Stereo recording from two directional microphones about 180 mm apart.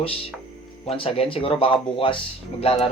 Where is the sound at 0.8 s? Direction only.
30° left (ahead or behind).